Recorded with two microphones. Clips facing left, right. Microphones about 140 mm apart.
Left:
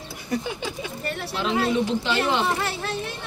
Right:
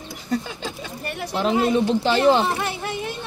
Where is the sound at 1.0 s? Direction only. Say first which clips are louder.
Right 1 dB; 15° right (ahead or behind).